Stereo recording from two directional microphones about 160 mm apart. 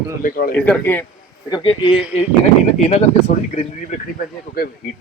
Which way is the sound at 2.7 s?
45° left (ahead or behind).